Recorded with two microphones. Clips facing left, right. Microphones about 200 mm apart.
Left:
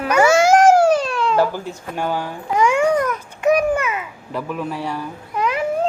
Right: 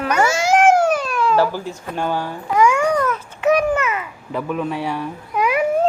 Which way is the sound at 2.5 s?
25° left (ahead or behind).